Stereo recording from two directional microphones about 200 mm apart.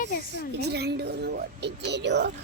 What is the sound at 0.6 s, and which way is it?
Speech, 55° right (ahead or behind).